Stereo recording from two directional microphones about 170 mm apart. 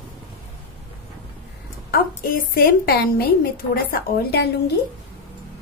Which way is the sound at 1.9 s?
60° left (ahead or behind).